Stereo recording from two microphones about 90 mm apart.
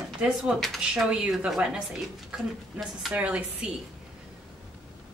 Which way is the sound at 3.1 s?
15° right (ahead or behind).